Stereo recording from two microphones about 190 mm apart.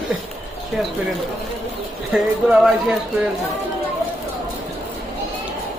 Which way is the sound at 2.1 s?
5° right (ahead or behind).